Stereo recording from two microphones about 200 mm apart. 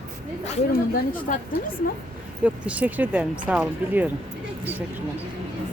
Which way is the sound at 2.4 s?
5° right (ahead or behind).